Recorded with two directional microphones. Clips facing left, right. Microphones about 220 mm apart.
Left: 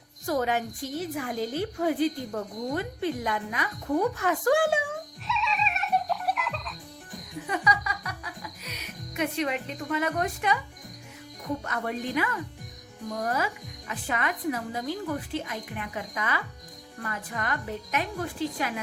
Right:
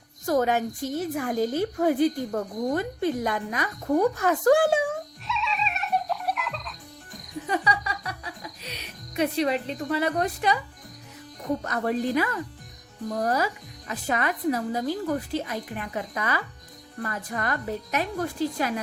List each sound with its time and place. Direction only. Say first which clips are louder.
0.3 s a woman's voice: right 4 dB; 45° right (ahead or behind)
5.3 s music: even; centre (ahead or behind)
7.4 s music: right 2 dB; 30° right (ahead or behind)
11.6 s speech: right 5 dB; 35° right (ahead or behind)